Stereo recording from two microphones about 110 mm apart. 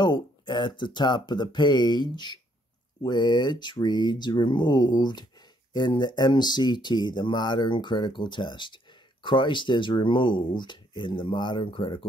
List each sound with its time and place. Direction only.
0.0 s speech: 45° left (ahead or behind)